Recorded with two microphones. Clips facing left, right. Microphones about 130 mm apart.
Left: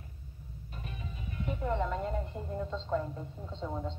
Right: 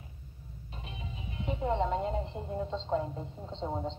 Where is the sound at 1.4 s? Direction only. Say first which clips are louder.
Right 2 dB; 20° right (ahead or behind).